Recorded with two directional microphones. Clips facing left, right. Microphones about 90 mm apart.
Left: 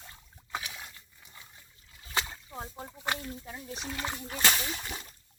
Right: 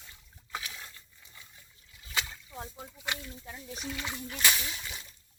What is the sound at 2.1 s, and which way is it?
Rowboat, 35° left (ahead or behind).